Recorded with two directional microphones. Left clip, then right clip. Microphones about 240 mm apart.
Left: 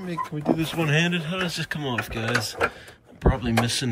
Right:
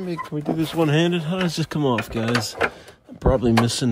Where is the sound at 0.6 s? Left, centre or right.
Centre.